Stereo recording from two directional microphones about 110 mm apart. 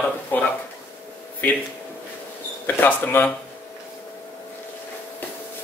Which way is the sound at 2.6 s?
20° left (ahead or behind).